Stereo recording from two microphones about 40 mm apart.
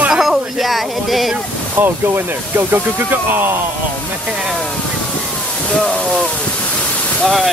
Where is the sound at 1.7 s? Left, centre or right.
Right.